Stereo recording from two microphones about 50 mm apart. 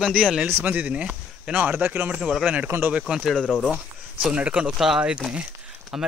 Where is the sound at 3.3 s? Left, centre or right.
Centre.